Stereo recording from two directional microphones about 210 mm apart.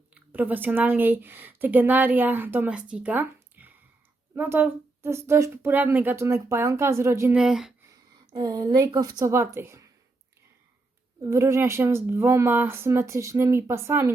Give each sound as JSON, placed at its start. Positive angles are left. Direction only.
{"t": 0.1, "sound": "speech", "side_deg": -10}
{"t": 8.3, "sound": "speech", "side_deg": -20}
{"t": 11.2, "sound": "speech", "side_deg": -15}